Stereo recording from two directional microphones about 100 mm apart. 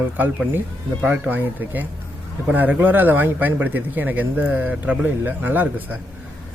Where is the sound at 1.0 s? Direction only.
15° right (ahead or behind).